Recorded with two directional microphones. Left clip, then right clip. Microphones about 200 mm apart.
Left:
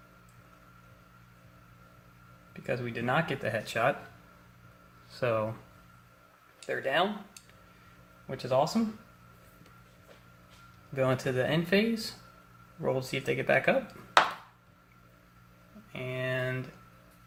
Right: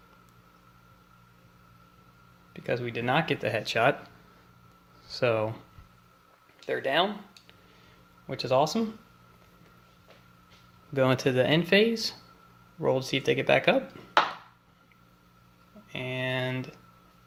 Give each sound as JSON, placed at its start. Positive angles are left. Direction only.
{"t": 2.5, "sound": "speech", "side_deg": -45}
{"t": 5.1, "sound": "speech", "side_deg": -45}
{"t": 6.7, "sound": "speech", "side_deg": -45}
{"t": 8.3, "sound": "speech", "side_deg": -50}
{"t": 10.9, "sound": "speech", "side_deg": -50}
{"t": 15.9, "sound": "a sound", "side_deg": -45}